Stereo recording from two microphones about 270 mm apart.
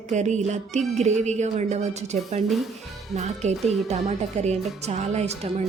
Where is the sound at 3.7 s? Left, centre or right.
Right.